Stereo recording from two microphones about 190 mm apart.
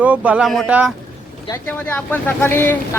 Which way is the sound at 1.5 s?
10° left (ahead or behind).